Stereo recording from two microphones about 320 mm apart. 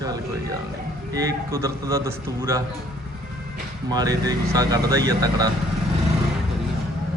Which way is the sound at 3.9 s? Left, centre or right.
Centre.